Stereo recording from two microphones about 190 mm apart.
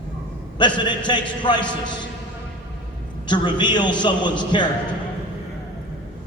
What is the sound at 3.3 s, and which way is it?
A man's voice, 25° left (ahead or behind).